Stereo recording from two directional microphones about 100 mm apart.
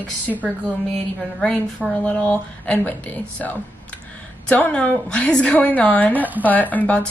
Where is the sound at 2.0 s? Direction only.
15° left (ahead or behind).